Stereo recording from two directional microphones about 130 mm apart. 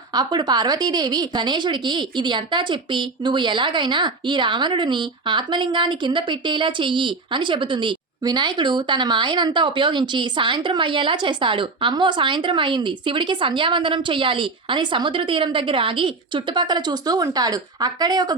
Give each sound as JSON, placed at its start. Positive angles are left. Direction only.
{"t": 0.1, "sound": "a woman's voice", "side_deg": -35}